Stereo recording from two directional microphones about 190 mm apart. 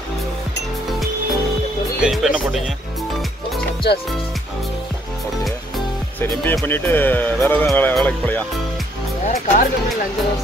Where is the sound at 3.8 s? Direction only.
60° left (ahead or behind).